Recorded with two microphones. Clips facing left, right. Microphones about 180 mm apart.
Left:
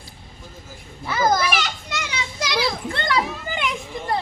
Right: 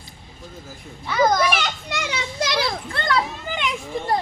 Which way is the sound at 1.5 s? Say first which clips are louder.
Right 1 dB; 55° right (ahead or behind).